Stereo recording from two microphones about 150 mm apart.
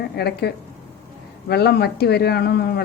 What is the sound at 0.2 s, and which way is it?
Speech, 90° left.